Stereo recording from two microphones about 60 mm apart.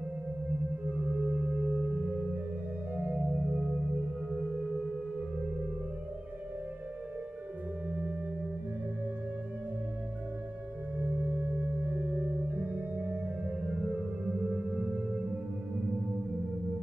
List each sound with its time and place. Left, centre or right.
1.1 s singing bowl: centre
2.9 s singing bowl: right
11.0 s singing bowl: right
12.5 s music: right
14.4 s music: centre